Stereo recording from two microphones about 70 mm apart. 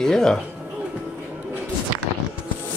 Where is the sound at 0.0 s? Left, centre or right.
Centre.